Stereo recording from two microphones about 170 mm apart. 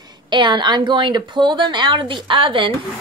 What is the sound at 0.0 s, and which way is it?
A woman's voice, 25° right (ahead or behind).